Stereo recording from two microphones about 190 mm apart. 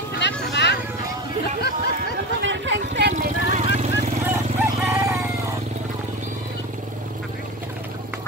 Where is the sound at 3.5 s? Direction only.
35° right (ahead or behind).